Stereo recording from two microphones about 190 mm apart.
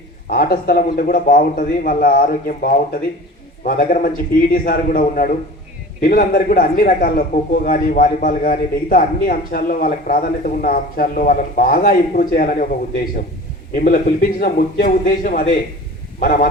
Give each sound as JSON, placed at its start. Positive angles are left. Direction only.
{"t": 0.3, "sound": "a man's voice", "side_deg": 50}
{"t": 13.7, "sound": "a man's voice", "side_deg": 45}